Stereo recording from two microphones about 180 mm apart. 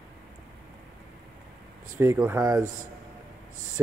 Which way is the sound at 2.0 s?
15° right (ahead or behind).